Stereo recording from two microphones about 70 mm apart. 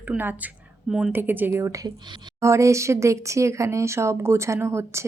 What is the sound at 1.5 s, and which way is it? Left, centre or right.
Speech, right.